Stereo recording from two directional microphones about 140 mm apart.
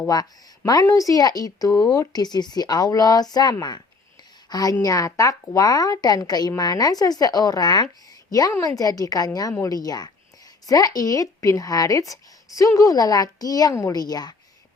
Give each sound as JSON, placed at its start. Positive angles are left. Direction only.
{"t": 0.1, "sound": "a woman's voice", "side_deg": 25}